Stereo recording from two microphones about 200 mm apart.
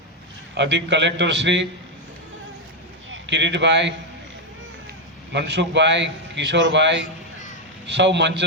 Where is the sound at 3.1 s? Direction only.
60° right (ahead or behind).